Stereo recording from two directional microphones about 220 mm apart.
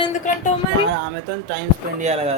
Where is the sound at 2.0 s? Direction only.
30° right (ahead or behind).